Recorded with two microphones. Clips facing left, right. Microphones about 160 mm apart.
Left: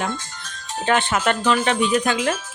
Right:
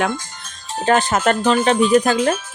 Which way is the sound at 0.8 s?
40° right (ahead or behind).